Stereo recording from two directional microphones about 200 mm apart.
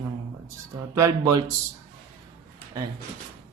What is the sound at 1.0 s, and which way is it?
Speech, 15° right (ahead or behind).